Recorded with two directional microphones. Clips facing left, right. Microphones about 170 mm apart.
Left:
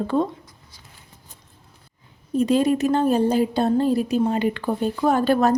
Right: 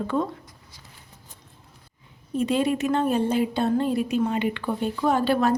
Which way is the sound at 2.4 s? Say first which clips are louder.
Left 4 dB; 40° left (ahead or behind).